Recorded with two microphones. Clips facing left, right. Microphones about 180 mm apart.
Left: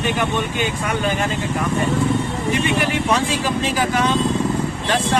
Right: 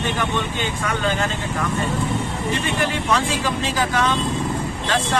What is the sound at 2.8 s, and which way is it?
Speech, 15° left (ahead or behind).